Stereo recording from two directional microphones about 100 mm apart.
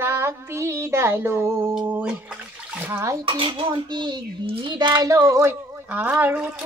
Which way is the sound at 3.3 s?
60° right (ahead or behind).